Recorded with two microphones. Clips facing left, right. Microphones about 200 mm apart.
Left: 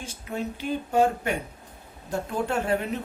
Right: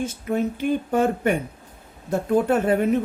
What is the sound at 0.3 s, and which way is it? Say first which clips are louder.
Speech: right 7 dB; 55° right (ahead or behind).